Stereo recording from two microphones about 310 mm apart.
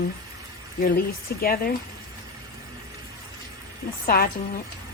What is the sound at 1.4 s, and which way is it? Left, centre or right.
Speech, left.